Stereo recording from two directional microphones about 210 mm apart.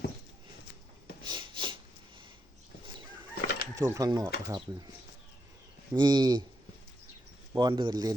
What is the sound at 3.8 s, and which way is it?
Speech, 15° right (ahead or behind).